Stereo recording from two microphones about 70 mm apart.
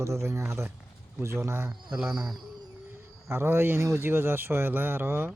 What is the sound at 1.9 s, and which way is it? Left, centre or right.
Speech, centre.